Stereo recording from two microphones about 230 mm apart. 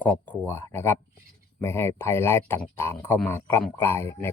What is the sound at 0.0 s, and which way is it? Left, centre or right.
Speech, centre.